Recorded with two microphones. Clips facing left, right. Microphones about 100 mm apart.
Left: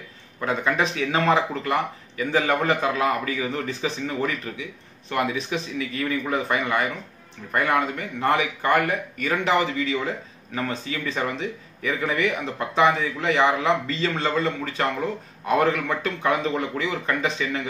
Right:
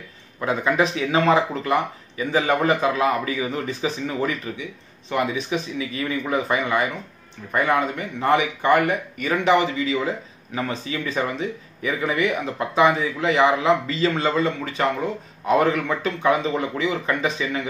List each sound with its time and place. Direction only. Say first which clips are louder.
0.4 s a man's voice: right 3 dB; 10° right (ahead or behind)
8.2 s a man's voice: right 3 dB; 10° right (ahead or behind)